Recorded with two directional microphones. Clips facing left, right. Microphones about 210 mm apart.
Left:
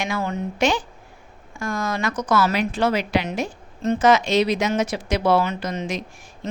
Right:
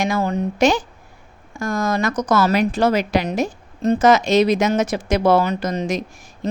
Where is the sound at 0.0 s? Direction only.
40° right (ahead or behind).